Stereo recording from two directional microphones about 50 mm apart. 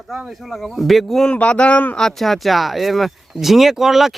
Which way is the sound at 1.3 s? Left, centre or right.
Left.